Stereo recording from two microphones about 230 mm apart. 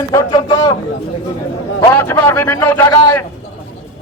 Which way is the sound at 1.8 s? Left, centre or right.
Centre.